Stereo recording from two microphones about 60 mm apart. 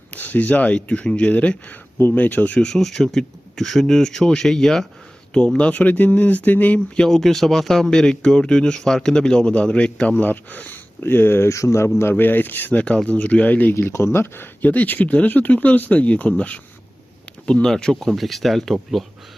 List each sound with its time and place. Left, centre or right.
0.1 s a man's voice: left
2.0 s a man's voice: left
2.6 s speech: centre
5.5 s a man's voice: left
7.1 s a man's voice: centre; by 11.4 s left
11.4 s a man's voice: left
12.1 s a man's voice: left
13.7 s speech: left
14.7 s a man's voice: left
17.4 s speech: centre